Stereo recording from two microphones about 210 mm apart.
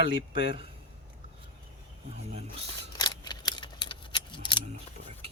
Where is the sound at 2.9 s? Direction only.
20° left (ahead or behind).